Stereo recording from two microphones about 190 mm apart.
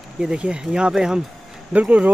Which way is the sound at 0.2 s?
5° right (ahead or behind).